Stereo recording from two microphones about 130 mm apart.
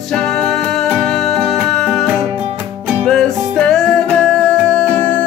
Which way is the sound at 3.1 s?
5° left (ahead or behind).